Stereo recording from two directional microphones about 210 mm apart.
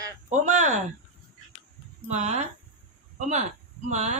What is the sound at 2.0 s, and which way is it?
Speech, 35° right (ahead or behind).